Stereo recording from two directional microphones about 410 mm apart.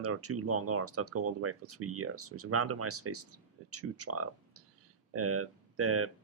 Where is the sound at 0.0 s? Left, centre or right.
Right.